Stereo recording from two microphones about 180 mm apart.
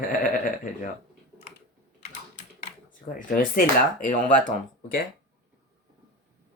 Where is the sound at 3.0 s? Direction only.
50° left (ahead or behind).